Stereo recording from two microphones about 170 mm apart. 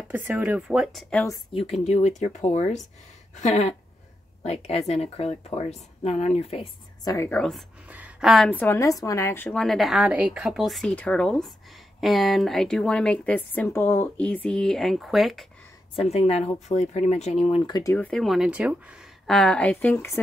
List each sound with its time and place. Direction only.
0.1 s speech: 10° right (ahead or behind)
1.5 s speech: 35° left (ahead or behind)
7.1 s a woman's voice: 15° left (ahead or behind)
7.3 s speech: 5° left (ahead or behind)
8.5 s speech: 10° left (ahead or behind)
16.0 s speech: 40° left (ahead or behind)
17.9 s speech: 5° left (ahead or behind)